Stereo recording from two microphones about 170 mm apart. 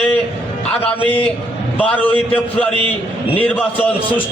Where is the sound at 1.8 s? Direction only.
10° left (ahead or behind).